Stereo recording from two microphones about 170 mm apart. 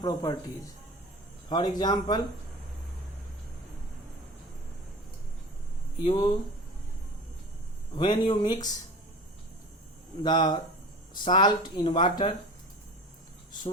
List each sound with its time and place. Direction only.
0.0 s speech: 20° left (ahead or behind)
6.1 s speech: 25° left (ahead or behind)
7.9 s speech: 25° left (ahead or behind)
10.2 s speech: 25° left (ahead or behind)